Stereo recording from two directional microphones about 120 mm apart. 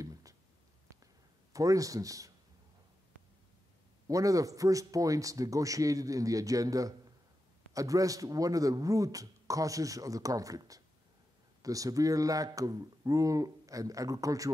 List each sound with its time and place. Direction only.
0.0 s a sound: 30° right (ahead or behind)
1.5 s speech: 30° right (ahead or behind)
4.1 s speech: 30° right (ahead or behind)